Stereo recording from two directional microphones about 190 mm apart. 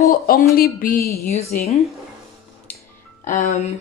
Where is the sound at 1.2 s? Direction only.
35° left (ahead or behind).